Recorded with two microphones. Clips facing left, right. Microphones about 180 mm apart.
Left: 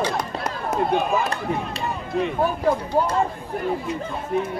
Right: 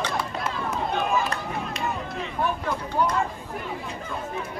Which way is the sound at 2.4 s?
40° left (ahead or behind).